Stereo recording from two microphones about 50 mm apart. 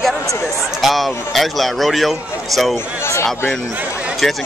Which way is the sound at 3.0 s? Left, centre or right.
Left.